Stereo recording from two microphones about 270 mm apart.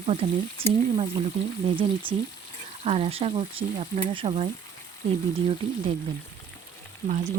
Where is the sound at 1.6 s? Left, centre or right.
Centre.